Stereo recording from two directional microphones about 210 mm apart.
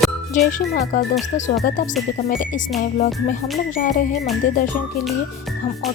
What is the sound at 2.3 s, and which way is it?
Speech, 40° left (ahead or behind).